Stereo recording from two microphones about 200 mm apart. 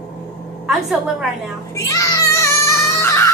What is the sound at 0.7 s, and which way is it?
Speech, centre (ahead or behind).